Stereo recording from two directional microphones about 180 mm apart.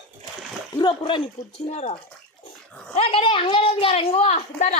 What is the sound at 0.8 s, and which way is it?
A woman's voice, 25° left (ahead or behind).